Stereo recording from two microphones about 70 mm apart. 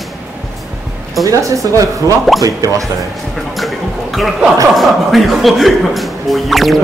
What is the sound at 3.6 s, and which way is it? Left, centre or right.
Speech, centre.